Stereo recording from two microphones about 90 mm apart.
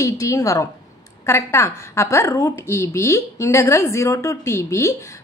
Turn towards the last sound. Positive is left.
turn(degrees=35)  # may be behind; listen again after turning